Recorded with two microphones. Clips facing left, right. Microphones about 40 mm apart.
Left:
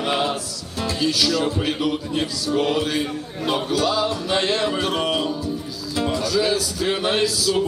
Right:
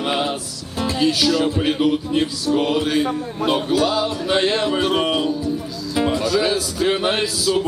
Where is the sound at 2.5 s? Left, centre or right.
Centre.